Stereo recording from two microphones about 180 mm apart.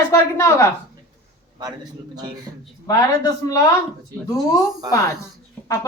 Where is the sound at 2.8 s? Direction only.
20° left (ahead or behind).